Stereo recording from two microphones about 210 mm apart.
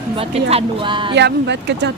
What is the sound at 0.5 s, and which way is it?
Speech, 25° right (ahead or behind).